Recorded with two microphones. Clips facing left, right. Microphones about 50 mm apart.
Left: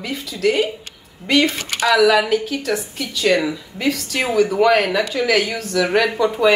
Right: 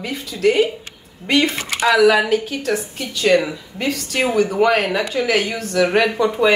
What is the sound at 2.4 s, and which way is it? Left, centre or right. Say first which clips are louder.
Speech: even; centre.